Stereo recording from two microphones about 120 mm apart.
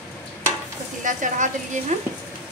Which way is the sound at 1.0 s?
90° right.